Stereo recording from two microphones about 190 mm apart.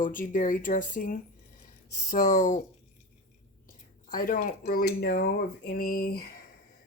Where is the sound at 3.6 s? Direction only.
45° left (ahead or behind).